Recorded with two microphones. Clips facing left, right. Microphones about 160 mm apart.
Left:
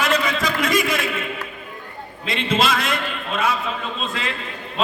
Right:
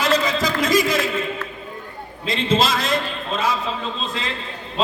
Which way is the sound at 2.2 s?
35° right (ahead or behind).